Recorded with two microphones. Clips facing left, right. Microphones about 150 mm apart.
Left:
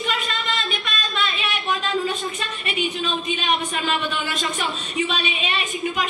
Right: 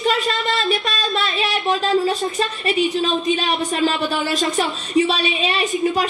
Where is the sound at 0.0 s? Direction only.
35° right (ahead or behind).